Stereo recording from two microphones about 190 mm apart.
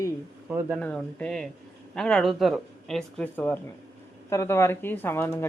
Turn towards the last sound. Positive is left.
turn(degrees=10)  # may be behind; listen again after turning